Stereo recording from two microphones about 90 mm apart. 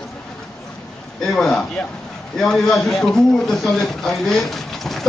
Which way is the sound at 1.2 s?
5° left (ahead or behind).